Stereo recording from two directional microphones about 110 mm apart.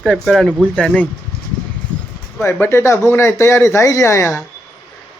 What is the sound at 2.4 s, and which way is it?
Speech, 25° left (ahead or behind).